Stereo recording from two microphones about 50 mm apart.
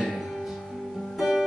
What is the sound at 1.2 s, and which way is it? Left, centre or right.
Music, centre.